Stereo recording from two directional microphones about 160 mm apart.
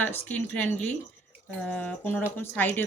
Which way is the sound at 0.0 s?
10° left (ahead or behind).